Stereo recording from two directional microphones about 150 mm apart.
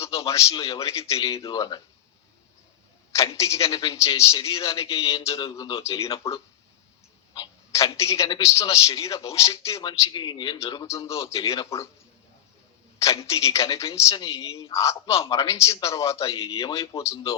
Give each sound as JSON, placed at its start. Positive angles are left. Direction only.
{"t": 0.0, "sound": "a sound", "side_deg": 20}
{"t": 0.5, "sound": "a man's voice", "side_deg": 25}
{"t": 3.1, "sound": "a man's voice", "side_deg": 20}
{"t": 7.3, "sound": "a man's voice", "side_deg": 25}
{"t": 13.0, "sound": "a man's voice", "side_deg": 20}